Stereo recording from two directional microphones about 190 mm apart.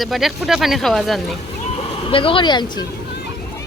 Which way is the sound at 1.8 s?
30° left (ahead or behind).